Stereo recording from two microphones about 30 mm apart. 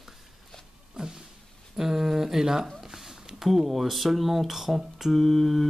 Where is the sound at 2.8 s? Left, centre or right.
Centre.